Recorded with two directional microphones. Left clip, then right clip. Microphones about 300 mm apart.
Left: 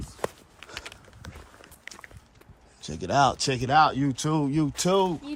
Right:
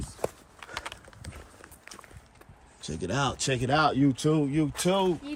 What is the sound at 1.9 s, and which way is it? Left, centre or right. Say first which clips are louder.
Run: even; right.